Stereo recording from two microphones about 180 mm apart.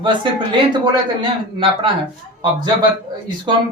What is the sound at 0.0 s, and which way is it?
Speech, 25° right (ahead or behind).